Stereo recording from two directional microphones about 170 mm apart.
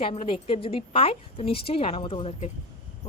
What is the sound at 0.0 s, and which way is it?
A woman's voice, 35° left (ahead or behind).